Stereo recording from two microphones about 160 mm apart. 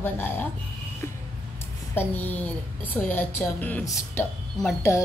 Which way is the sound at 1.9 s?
15° left (ahead or behind).